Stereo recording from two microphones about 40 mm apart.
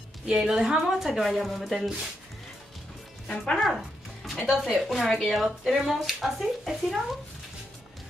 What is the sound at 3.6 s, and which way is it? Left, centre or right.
Music, centre.